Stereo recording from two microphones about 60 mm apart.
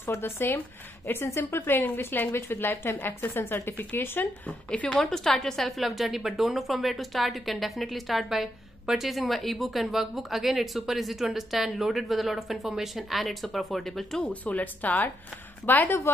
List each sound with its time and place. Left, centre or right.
0.0 s a woman's voice: left
4.5 s a woman's voice: centre
5.0 s a woman's voice: centre
14.2 s a woman's voice: left